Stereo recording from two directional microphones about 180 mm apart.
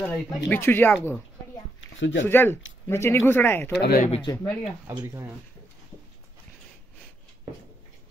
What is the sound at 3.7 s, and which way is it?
Speech, 70° left (ahead or behind).